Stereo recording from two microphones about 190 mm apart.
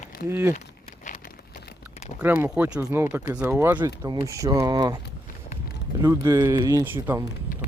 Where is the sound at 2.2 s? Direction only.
10° right (ahead or behind).